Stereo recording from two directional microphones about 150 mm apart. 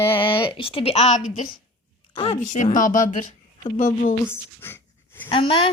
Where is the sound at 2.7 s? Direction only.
60° left (ahead or behind).